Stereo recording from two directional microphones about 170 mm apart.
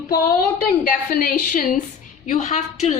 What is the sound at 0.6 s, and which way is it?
A woman's voice, 55° left (ahead or behind).